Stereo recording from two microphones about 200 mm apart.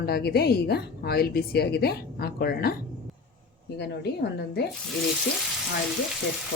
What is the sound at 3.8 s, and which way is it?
Speech, 55° left (ahead or behind).